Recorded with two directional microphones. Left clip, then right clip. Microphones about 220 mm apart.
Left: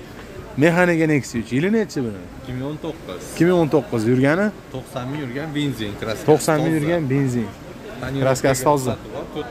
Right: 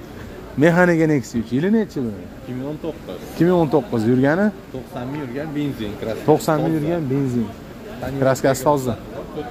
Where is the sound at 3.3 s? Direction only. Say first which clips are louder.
Even; 5° left (ahead or behind).